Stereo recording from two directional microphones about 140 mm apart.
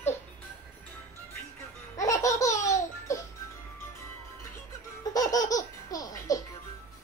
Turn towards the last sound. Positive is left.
turn(degrees=25)  # may be behind; listen again after turning